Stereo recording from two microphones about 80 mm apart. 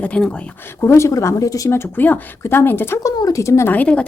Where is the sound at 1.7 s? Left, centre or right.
Left.